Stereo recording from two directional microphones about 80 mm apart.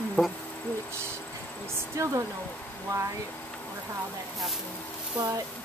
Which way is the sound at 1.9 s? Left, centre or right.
Right.